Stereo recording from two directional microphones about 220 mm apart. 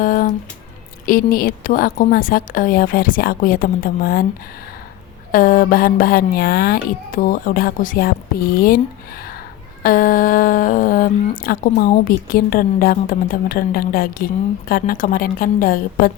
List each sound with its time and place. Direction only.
0.0 s music: 40° left (ahead or behind)
1.0 s speech: 40° left (ahead or behind)
5.3 s speech: 40° left (ahead or behind)